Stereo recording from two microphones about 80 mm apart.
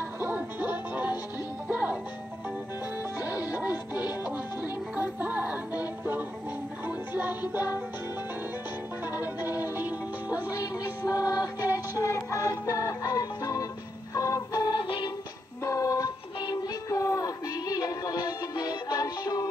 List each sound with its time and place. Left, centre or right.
0.2 s music: right
3.2 s music: centre
9.0 s music: right
11.1 s music: left
14.8 s music: left
15.6 s music: left